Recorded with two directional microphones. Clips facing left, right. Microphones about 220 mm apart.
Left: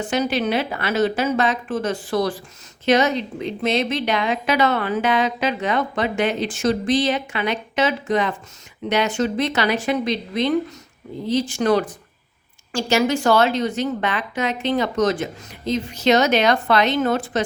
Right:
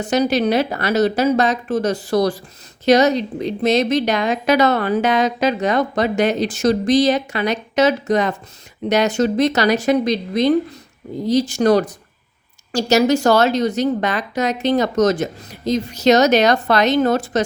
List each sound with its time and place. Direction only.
0.0 s a woman's voice: 40° right (ahead or behind)